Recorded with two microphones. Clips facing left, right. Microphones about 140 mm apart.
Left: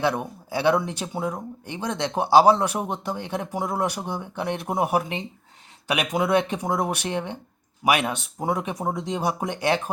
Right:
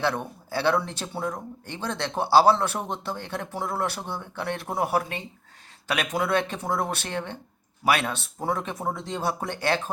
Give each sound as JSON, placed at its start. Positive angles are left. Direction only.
{"t": 0.0, "sound": "speech", "side_deg": 15}